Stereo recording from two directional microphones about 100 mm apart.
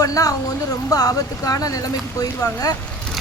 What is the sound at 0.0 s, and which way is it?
Speech, 35° left (ahead or behind).